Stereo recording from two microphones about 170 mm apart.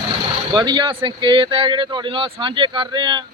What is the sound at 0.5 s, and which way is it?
Speech, 25° right (ahead or behind).